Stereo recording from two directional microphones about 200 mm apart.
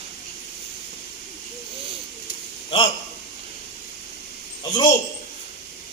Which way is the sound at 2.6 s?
25° left (ahead or behind).